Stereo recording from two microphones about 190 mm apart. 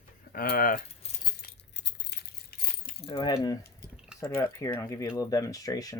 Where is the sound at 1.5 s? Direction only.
65° left (ahead or behind).